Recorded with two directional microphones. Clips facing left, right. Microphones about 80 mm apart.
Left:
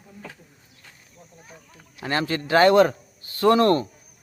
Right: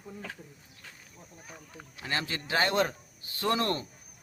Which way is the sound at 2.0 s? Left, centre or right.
Left.